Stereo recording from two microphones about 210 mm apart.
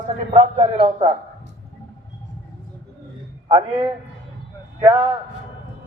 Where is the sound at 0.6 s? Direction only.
25° right (ahead or behind).